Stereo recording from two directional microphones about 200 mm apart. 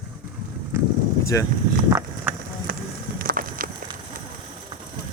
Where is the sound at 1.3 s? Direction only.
15° left (ahead or behind).